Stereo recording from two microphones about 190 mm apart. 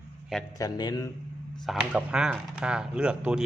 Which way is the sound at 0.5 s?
20° left (ahead or behind).